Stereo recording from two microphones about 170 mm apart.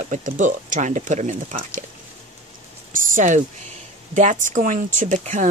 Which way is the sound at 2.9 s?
50° right (ahead or behind).